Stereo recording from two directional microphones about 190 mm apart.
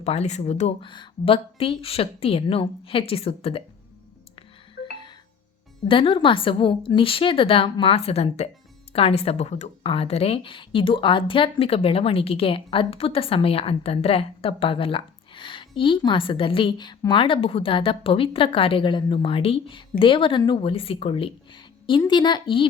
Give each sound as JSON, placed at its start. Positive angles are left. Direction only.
{"t": 0.0, "sound": "speech", "side_deg": 35}
{"t": 4.8, "sound": "music", "side_deg": 55}
{"t": 5.9, "sound": "speech", "side_deg": 25}